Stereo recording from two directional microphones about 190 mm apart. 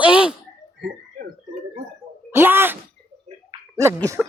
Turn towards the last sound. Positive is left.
turn(degrees=-15)  # may be behind; listen again after turning